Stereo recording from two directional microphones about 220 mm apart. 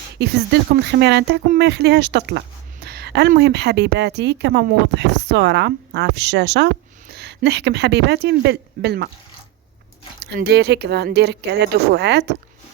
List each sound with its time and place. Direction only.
0.2 s a woman's voice: 50° right (ahead or behind)
10.2 s a woman's voice: 50° right (ahead or behind)